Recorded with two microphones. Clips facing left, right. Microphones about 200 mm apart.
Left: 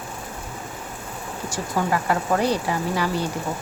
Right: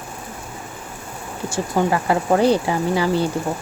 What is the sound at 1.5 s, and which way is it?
Speech, 25° right (ahead or behind).